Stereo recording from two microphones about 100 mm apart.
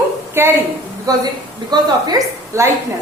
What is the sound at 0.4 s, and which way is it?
Speech, 25° right (ahead or behind).